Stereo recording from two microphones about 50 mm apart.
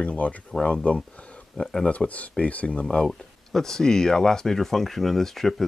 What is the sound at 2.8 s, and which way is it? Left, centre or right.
Speech, centre.